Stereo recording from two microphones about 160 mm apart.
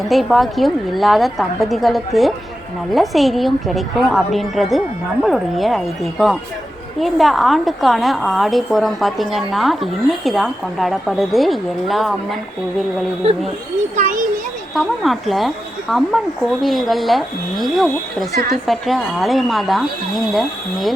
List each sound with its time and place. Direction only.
0.1 s a woman's voice: centre (ahead or behind)
13.9 s a child's voice: 50° right (ahead or behind)
14.8 s a woman's voice: centre (ahead or behind)